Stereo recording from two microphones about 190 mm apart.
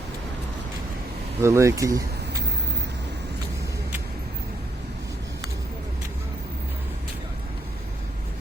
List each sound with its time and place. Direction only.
1.4 s speech: 15° right (ahead or behind)